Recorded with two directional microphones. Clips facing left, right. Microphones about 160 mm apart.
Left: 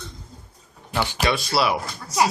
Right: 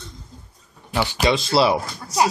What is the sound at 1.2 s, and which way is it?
Speech, 25° right (ahead or behind).